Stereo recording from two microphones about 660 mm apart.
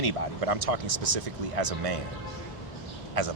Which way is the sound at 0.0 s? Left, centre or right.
Right.